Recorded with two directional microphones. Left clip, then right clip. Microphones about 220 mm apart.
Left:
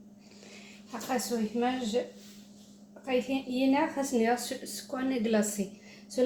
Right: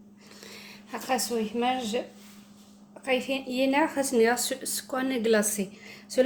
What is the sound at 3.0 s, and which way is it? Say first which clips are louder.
A woman's voice: right 3 dB; 45° right (ahead or behind).